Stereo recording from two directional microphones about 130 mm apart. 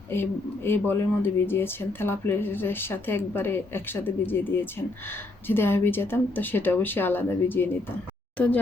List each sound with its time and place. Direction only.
0.1 s speech: 15° left (ahead or behind)